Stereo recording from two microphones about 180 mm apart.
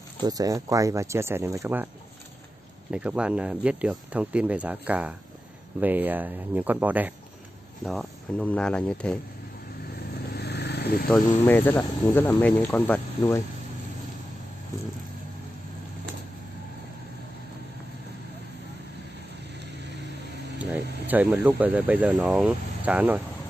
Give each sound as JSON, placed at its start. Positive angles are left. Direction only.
{"t": 0.2, "sound": "speech", "side_deg": -20}
{"t": 2.9, "sound": "speech", "side_deg": -5}
{"t": 10.3, "sound": "vehicle", "side_deg": 70}
{"t": 11.1, "sound": "speech", "side_deg": 5}
{"t": 20.5, "sound": "speech", "side_deg": -10}